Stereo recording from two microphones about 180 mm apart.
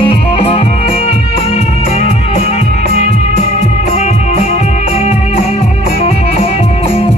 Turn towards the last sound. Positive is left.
turn(degrees=35)  # may be behind; listen again after turning